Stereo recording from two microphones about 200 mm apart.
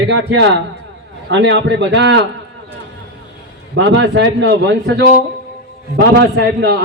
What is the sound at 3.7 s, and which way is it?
A man's voice, 65° right (ahead or behind).